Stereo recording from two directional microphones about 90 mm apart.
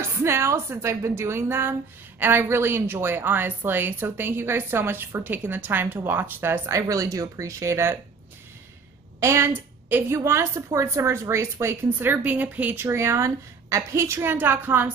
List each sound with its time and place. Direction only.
0.0 s a woman's voice: 30° right (ahead or behind)
9.2 s a woman's voice: 30° right (ahead or behind)